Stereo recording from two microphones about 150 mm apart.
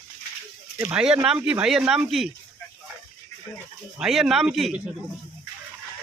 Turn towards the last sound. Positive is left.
turn(degrees=-5)  # may be behind; listen again after turning